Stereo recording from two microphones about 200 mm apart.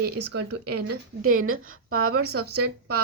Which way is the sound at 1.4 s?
90° right.